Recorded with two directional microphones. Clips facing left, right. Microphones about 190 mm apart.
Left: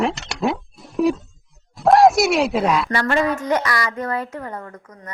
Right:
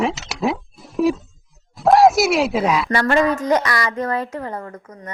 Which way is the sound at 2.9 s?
40° right (ahead or behind).